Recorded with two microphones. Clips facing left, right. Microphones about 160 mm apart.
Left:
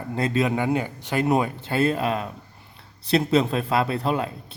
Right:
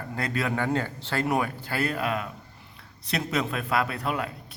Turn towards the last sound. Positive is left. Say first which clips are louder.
# left 5 dB
turn(degrees=25)  # may be behind; listen again after turning